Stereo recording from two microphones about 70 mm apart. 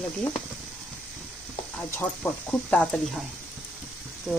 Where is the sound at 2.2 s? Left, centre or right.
Centre.